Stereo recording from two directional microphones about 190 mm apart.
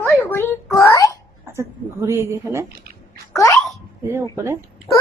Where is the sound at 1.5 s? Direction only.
15° right (ahead or behind).